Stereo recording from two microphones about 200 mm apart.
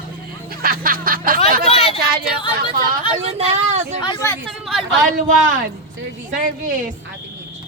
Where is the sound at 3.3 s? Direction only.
35° right (ahead or behind).